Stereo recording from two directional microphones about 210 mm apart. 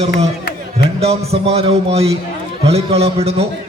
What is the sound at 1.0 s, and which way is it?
A man's voice, 30° right (ahead or behind).